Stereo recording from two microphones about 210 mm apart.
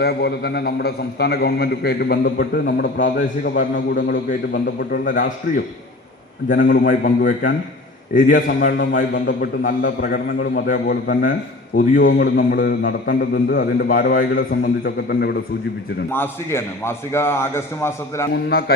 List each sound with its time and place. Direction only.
0.0 s a man's voice: 50° left (ahead or behind)
9.0 s a man's voice: 45° left (ahead or behind)
16.1 s a man's voice: 10° left (ahead or behind)
18.3 s a man's voice: 50° left (ahead or behind)